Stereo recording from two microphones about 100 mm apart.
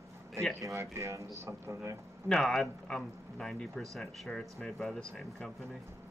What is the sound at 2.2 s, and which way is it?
A man's voice, centre (ahead or behind).